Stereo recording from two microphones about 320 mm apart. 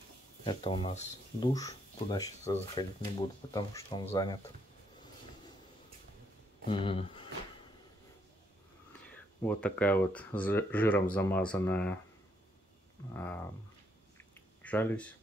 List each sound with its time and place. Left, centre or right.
0.5 s speech: centre
6.7 s speech: centre
9.1 s speech: centre
13.1 s speech: centre
14.1 s a sound: centre